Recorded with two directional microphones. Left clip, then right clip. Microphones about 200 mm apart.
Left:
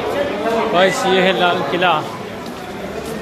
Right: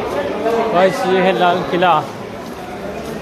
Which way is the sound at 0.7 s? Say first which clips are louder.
Left 1 dB; 5° right (ahead or behind).